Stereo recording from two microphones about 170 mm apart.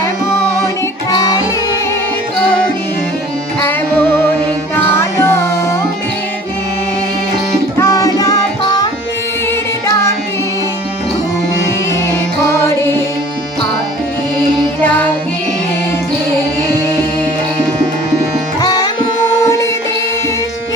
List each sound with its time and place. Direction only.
1.1 s music: 25° left (ahead or behind)
3.6 s music: 10° left (ahead or behind)
7.8 s music: 20° left (ahead or behind)
14.8 s music: 10° left (ahead or behind)
18.6 s sitar: 25° left (ahead or behind)